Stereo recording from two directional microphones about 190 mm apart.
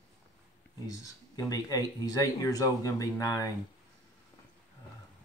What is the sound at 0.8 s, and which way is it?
Speech, 20° left (ahead or behind).